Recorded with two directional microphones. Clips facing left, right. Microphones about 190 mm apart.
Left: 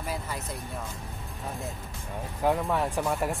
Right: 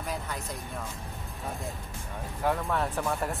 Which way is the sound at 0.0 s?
5° left (ahead or behind).